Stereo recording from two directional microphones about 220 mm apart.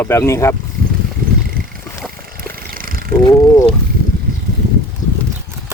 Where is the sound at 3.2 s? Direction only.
15° left (ahead or behind).